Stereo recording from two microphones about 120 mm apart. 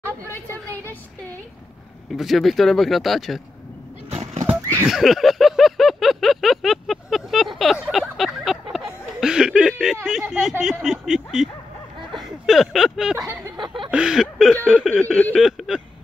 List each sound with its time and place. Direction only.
2.1 s speech: centre (ahead or behind)
4.1 s horse: 60° right (ahead or behind)
4.6 s horse: 25° right (ahead or behind)
4.8 s a sound: centre (ahead or behind)
9.2 s snicker: 5° right (ahead or behind)
10.0 s speech: 5° right (ahead or behind)
15.0 s a sound: 10° left (ahead or behind)
15.3 s speech: centre (ahead or behind)